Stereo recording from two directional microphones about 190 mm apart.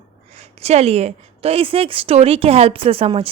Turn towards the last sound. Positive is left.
turn(degrees=-30)  # may be behind; listen again after turning